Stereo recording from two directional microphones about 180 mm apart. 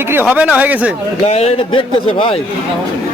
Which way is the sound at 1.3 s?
35° left (ahead or behind).